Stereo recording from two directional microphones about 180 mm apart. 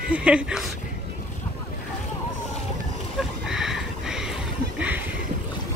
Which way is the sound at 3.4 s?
Centre (ahead or behind).